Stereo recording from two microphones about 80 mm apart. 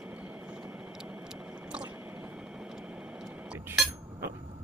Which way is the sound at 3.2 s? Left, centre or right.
Centre.